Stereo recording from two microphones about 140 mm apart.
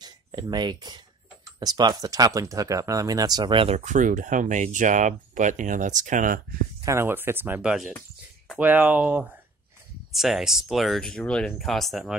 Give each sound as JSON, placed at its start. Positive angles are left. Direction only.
{"t": 0.0, "sound": "speech", "side_deg": -30}
{"t": 3.7, "sound": "speech", "side_deg": -65}
{"t": 6.8, "sound": "speech", "side_deg": -20}